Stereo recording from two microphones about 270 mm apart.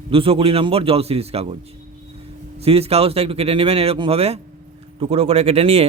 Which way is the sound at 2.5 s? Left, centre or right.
Right.